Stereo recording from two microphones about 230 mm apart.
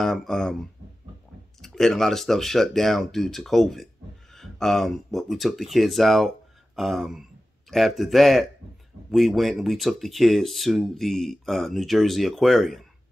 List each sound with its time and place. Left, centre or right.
0.0 s speech: centre